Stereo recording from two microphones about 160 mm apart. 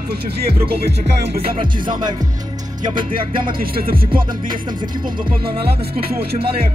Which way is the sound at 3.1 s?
60° right (ahead or behind).